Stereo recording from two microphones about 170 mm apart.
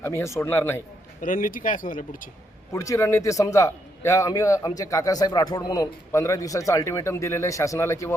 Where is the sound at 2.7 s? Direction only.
15° left (ahead or behind).